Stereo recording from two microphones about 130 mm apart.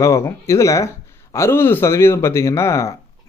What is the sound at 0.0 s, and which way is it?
Speech, 20° left (ahead or behind).